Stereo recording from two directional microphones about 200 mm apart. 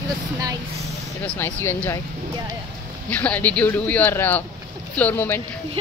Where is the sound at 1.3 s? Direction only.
10° left (ahead or behind).